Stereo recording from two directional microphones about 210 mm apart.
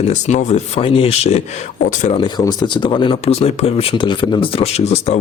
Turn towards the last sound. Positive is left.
turn(degrees=30)  # may be behind; listen again after turning